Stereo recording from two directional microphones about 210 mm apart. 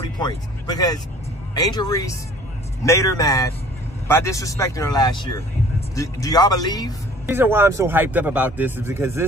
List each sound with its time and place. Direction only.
0.7 s speech: 20° left (ahead or behind)
7.2 s a man's voice: 10° right (ahead or behind)